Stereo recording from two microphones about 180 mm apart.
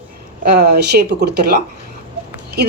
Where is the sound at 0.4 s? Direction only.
65° right (ahead or behind).